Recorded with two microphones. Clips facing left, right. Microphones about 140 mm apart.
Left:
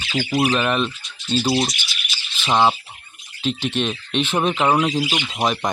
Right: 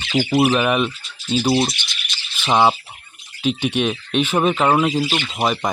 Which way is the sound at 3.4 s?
10° right (ahead or behind).